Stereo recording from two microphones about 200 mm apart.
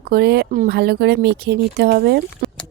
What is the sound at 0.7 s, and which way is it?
Speech, 55° right (ahead or behind).